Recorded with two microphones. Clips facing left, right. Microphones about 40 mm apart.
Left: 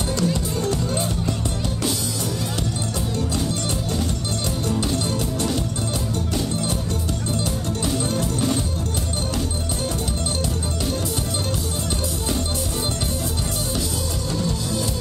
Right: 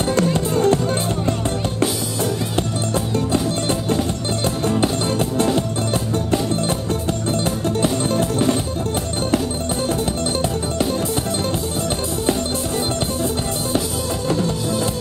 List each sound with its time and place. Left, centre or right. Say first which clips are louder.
0.1 s music: right 5 dB; right
4.6 s music: right 5 dB; right
7.8 s music: right 4 dB; right